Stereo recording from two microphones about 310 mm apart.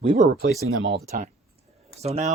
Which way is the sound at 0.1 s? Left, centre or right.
Right.